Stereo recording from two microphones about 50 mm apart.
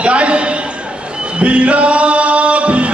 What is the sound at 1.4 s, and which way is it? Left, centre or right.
Music, right.